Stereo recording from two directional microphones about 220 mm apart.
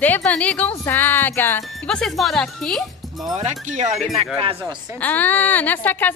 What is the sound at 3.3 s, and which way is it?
Speech, 30° right (ahead or behind).